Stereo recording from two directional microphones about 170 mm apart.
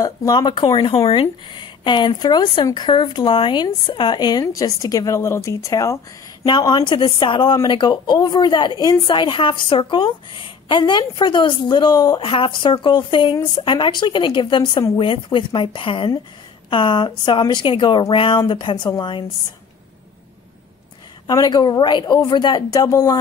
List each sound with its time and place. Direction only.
0.0 s a woman's voice: 20° left (ahead or behind)
21.3 s a woman's voice: 20° left (ahead or behind)